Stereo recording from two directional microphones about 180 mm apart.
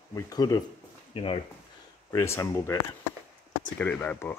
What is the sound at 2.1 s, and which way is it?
Speech, 15° left (ahead or behind).